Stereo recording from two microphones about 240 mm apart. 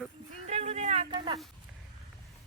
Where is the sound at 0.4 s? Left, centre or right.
Right.